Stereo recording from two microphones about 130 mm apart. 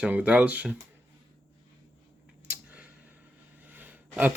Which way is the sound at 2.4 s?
10° right (ahead or behind).